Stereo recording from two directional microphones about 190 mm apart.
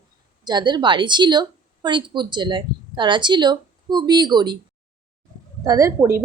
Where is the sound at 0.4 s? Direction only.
20° right (ahead or behind).